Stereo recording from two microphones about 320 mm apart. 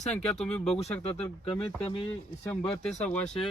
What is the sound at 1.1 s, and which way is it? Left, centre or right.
Speech, centre.